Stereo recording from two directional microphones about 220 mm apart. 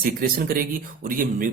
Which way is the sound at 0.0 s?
45° right (ahead or behind).